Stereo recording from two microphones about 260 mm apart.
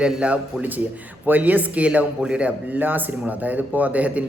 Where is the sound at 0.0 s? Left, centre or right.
Centre.